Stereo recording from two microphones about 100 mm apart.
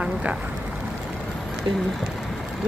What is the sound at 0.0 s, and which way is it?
Speech, 10° right (ahead or behind).